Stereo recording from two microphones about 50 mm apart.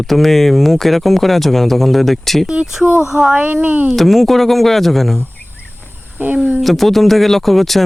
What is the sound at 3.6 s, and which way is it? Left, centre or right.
Speech, right.